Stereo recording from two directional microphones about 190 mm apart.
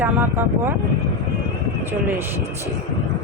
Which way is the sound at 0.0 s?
10° right (ahead or behind).